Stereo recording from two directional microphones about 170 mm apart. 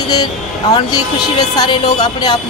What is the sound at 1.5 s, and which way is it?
Speech, 25° left (ahead or behind).